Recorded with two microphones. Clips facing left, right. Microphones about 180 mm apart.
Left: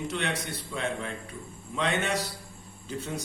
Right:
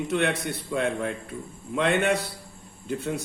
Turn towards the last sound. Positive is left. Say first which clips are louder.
# right 6 dB
turn(degrees=-60)  # may be behind; listen again after turning